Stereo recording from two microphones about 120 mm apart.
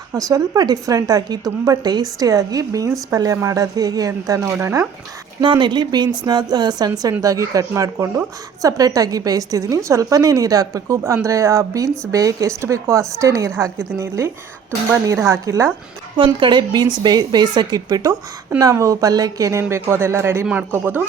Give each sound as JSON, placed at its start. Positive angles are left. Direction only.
{"t": 0.1, "sound": "a woman's voice", "side_deg": -30}
{"t": 5.4, "sound": "a woman's voice", "side_deg": -40}
{"t": 16.1, "sound": "a woman's voice", "side_deg": -40}
{"t": 20.5, "sound": "speech", "side_deg": -10}